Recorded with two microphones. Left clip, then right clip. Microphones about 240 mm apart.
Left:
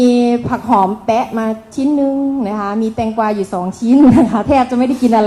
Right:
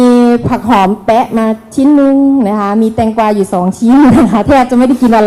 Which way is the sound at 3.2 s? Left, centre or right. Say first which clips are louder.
Right 6 dB; right.